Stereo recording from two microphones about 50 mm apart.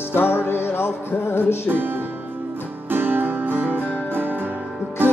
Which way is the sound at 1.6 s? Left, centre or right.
Right.